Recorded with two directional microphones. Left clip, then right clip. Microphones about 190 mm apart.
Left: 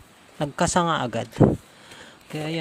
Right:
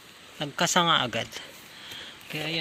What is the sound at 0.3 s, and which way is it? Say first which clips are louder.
Speech: left 2 dB; 30° left (ahead or behind).